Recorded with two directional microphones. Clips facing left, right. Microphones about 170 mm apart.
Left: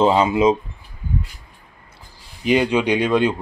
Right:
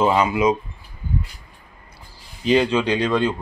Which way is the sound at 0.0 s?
25° left (ahead or behind).